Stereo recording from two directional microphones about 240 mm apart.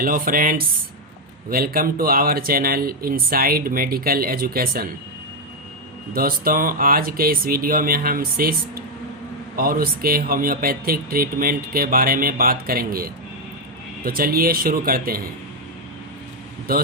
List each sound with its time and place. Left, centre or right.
0.0 s speech: right
6.1 s speech: right
16.7 s speech: right